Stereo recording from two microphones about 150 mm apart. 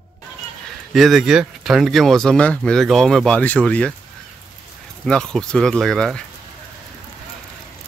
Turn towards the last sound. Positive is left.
turn(degrees=5)  # may be behind; listen again after turning